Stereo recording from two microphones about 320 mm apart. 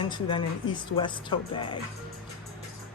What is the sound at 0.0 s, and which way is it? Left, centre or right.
Speech, centre.